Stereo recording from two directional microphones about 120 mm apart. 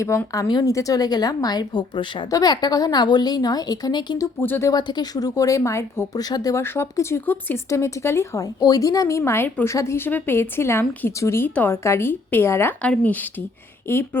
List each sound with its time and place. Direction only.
0.3 s a woman's voice: 30° left (ahead or behind)
4.4 s speech: 20° left (ahead or behind)
4.7 s speech: 35° left (ahead or behind); by 14.2 s 20° left (ahead or behind)